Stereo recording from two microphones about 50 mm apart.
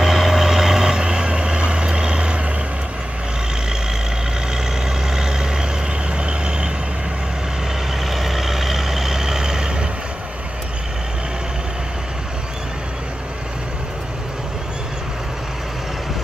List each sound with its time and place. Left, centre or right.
0.0 s vehicle: centre
5.1 s vehicle: centre
8.0 s vehicle: centre